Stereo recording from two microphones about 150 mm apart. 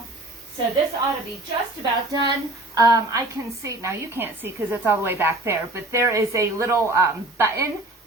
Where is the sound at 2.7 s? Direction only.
25° right (ahead or behind).